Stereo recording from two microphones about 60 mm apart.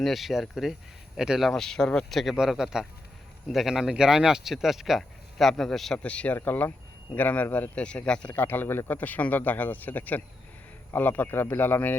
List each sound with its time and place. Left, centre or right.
0.0 s speech: centre
1.5 s a man's voice: centre
6.0 s speech: left
6.3 s a man's voice: left
7.8 s speech: centre
8.4 s a man's voice: left